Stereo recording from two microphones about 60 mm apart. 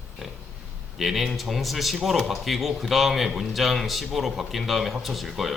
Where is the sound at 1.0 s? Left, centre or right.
Centre.